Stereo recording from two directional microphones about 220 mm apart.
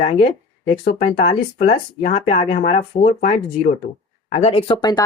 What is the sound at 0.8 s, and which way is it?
Speech, 40° left (ahead or behind).